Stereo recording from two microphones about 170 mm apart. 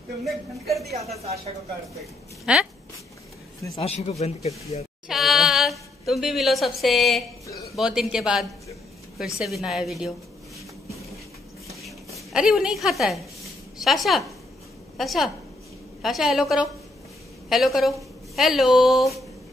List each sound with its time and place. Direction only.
0.2 s a woman's voice: centre (ahead or behind)
1.1 s speech: 35° right (ahead or behind)
2.4 s a woman's voice: 5° right (ahead or behind)
3.7 s speech: 40° left (ahead or behind)
5.0 s a woman's voice: centre (ahead or behind)
12.3 s a woman's voice: 5° right (ahead or behind)